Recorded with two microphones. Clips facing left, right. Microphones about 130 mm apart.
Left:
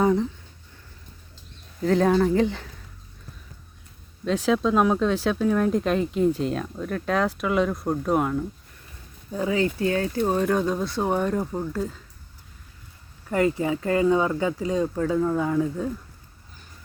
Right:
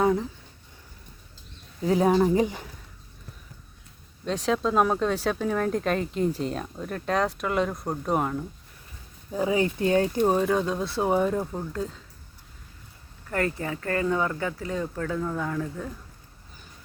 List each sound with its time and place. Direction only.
0.0 s speech: centre (ahead or behind)
1.8 s speech: 10° right (ahead or behind)
4.3 s speech: centre (ahead or behind)
9.3 s speech: 15° right (ahead or behind)
10.2 s speech: 5° right (ahead or behind)
13.3 s speech: 15° left (ahead or behind)